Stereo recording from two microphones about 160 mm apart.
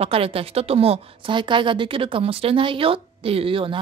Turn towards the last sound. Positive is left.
turn(degrees=-35)  # may be behind; listen again after turning